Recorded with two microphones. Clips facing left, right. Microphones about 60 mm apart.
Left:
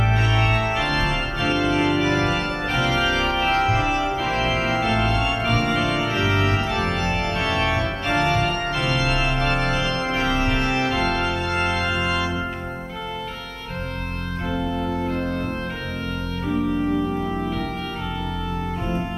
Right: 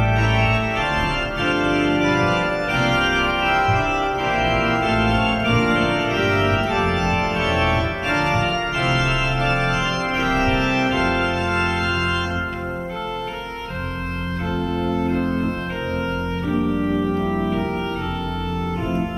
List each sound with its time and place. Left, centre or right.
0.1 s organ: centre
4.7 s organ: centre
6.4 s organ: centre
6.7 s organ: centre
9.6 s organ: centre
10.9 s organ: centre
16.5 s organ: centre